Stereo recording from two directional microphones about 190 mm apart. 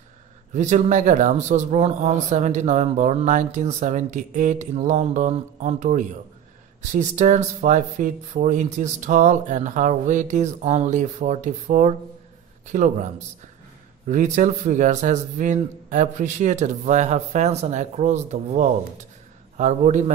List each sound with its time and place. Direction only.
0.6 s speech: 40° right (ahead or behind)